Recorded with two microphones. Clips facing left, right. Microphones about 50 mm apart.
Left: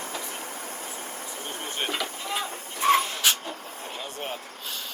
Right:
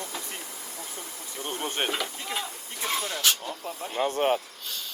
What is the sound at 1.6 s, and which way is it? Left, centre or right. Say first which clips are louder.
Speech: right 3 dB; right.